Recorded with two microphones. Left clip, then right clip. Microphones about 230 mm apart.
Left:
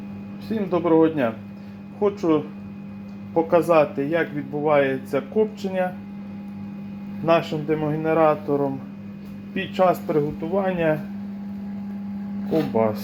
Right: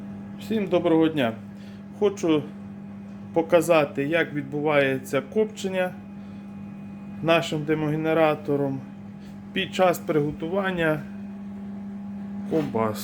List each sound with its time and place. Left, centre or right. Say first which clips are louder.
0.7 s speech: left 3 dB; centre
7.3 s speech: left 2 dB; centre
12.7 s speech: left 4 dB; centre